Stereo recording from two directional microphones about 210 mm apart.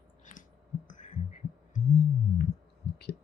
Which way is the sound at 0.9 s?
35° left (ahead or behind).